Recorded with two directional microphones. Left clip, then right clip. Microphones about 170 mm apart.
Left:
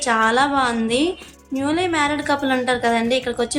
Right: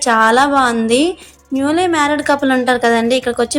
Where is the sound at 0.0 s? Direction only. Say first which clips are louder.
Right 6 dB; 35° right (ahead or behind).